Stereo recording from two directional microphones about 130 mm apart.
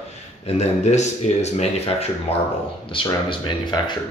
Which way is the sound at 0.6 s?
60° left (ahead or behind).